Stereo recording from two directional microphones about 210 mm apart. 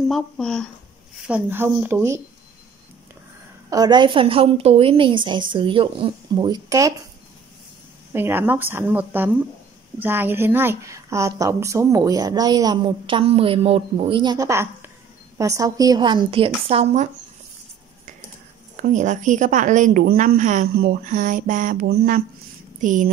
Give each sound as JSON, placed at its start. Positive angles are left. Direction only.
{"t": 0.1, "sound": "speech", "side_deg": 5}
{"t": 1.2, "sound": "a woman's voice", "side_deg": -10}
{"t": 3.7, "sound": "a woman's voice", "side_deg": -20}
{"t": 8.1, "sound": "a woman's voice", "side_deg": -10}
{"t": 18.8, "sound": "a woman's voice", "side_deg": -35}